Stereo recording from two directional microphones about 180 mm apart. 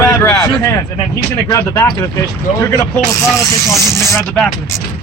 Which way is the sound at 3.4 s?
15° left (ahead or behind).